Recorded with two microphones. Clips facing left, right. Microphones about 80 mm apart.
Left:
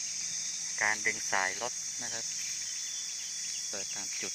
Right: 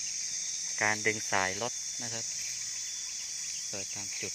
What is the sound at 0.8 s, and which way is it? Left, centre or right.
Cricket, centre.